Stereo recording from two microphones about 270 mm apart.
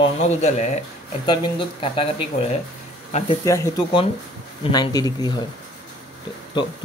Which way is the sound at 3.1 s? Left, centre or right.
Left.